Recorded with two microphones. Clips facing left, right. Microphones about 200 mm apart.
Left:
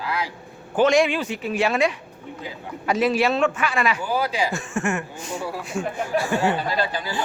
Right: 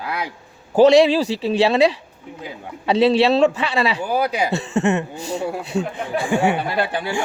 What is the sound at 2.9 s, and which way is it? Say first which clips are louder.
A man's voice: right 5 dB; 30° right (ahead or behind).